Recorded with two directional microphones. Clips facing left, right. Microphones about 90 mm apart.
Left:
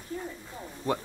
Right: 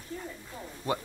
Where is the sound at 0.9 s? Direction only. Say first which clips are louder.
Left 2 dB; 5° right (ahead or behind).